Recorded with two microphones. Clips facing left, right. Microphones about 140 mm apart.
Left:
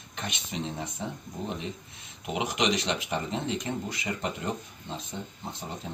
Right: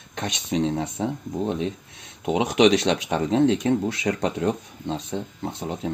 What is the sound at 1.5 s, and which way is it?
Speech, 85° right.